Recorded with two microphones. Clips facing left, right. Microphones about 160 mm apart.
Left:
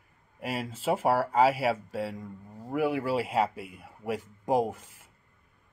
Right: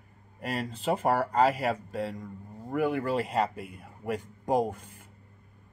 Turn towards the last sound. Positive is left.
turn(degrees=0)  # may be behind; listen again after turning